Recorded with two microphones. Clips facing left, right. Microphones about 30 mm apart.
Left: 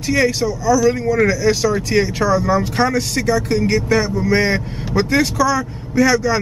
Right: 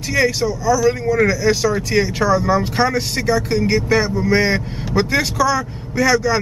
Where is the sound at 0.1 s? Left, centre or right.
Centre.